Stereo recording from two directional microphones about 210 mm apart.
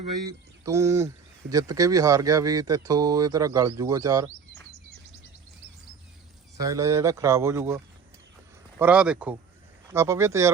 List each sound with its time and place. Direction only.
0.3 s speech: 15° right (ahead or behind)
6.6 s speech: 15° right (ahead or behind)
8.8 s speech: 5° right (ahead or behind)